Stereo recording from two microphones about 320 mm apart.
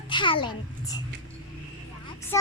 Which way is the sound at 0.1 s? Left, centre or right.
Centre.